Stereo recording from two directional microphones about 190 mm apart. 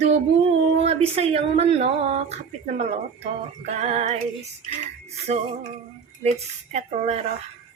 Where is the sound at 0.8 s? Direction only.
30° right (ahead or behind).